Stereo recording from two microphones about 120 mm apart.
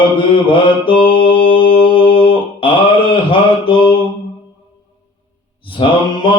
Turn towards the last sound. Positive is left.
turn(degrees=45)  # may be behind; listen again after turning